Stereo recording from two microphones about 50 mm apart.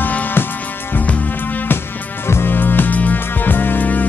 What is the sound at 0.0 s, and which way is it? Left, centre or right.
Music, left.